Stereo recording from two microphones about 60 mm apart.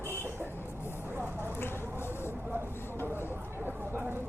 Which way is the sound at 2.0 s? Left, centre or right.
Left.